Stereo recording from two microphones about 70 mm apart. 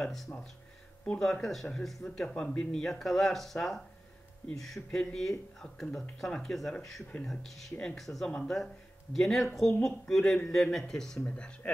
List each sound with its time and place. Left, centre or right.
0.0 s speech: centre
4.9 s speech: centre